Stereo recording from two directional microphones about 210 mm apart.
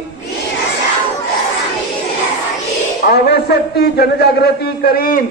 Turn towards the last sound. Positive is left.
turn(degrees=40)  # may be behind; listen again after turning